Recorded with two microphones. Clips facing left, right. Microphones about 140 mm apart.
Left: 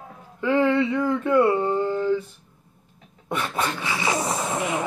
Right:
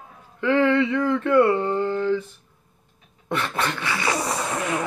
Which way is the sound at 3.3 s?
10° left (ahead or behind).